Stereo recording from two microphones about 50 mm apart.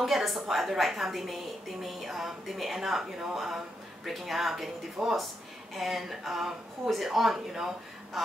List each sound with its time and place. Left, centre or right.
0.0 s a woman's voice: centre